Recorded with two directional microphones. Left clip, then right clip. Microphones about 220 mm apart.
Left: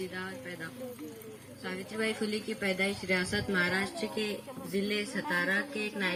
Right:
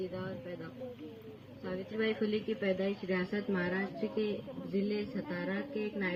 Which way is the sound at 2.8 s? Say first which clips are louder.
Left 4 dB; 45° left (ahead or behind).